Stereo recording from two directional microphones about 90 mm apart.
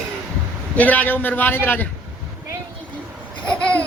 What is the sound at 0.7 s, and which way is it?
Speech, 20° left (ahead or behind).